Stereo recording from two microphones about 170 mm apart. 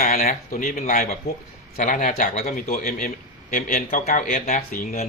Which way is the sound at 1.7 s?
50° left (ahead or behind).